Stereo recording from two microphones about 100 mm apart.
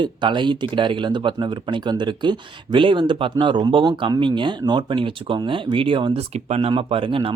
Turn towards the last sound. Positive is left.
turn(degrees=-60)  # may be behind; listen again after turning